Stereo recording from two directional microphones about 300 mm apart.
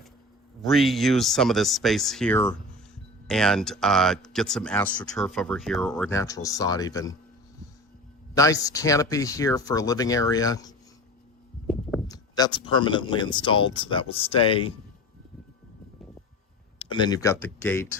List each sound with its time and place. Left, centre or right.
0.6 s speech: centre
8.4 s speech: centre
12.0 s speech: centre
16.7 s speech: centre